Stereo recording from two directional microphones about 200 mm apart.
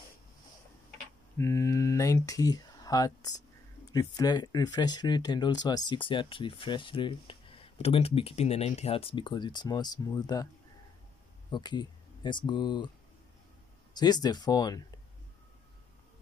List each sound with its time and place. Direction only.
1.4 s speech: 15° left (ahead or behind)
11.5 s speech: 20° left (ahead or behind)
13.9 s speech: 20° left (ahead or behind)